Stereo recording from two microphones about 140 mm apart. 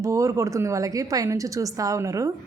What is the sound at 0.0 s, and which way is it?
A woman's voice, 20° right (ahead or behind).